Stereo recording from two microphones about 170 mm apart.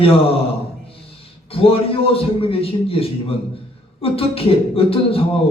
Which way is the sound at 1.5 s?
35° left (ahead or behind).